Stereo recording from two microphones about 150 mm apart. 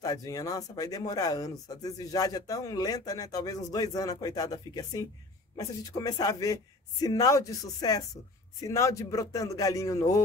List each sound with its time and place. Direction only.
0.0 s speech: 25° left (ahead or behind)